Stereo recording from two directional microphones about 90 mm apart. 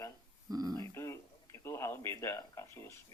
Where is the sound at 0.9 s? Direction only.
35° left (ahead or behind).